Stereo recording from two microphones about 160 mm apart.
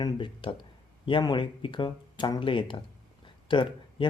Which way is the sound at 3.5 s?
30° left (ahead or behind).